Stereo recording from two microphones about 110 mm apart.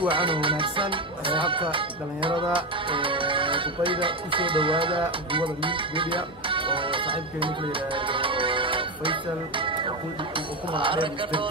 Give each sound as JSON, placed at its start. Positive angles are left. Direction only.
{"t": 0.0, "sound": "speech", "side_deg": -50}